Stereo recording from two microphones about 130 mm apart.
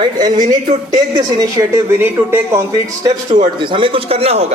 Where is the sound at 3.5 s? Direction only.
40° right (ahead or behind).